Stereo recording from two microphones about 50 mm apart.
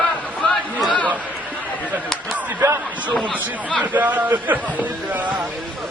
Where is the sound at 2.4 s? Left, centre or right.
Right.